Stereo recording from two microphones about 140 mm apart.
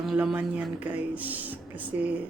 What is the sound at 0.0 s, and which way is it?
A woman's voice, 5° right (ahead or behind).